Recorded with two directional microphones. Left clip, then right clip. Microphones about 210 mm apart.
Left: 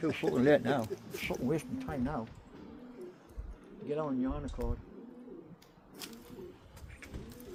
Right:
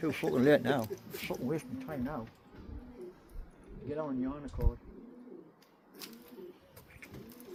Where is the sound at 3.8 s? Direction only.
5° left (ahead or behind).